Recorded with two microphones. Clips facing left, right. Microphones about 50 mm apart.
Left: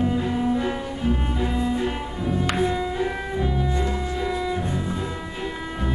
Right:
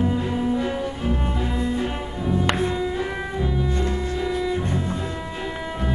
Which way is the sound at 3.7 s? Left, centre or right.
Left.